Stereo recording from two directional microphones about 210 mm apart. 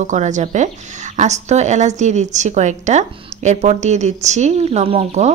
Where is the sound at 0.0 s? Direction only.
35° right (ahead or behind).